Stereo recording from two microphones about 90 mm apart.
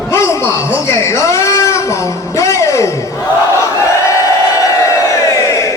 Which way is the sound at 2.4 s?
35° left (ahead or behind).